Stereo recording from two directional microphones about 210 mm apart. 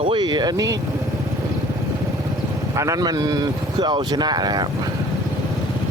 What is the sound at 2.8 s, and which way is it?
Speech, 15° right (ahead or behind).